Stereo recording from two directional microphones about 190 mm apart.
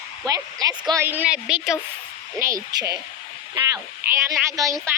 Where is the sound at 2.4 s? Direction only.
20° right (ahead or behind).